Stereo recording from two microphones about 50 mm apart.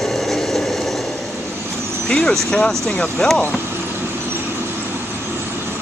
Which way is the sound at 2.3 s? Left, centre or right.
Centre.